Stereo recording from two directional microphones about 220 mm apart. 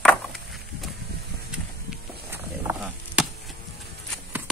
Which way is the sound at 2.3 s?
5° right (ahead or behind).